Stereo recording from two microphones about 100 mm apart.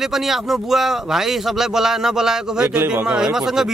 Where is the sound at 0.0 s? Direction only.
5° right (ahead or behind).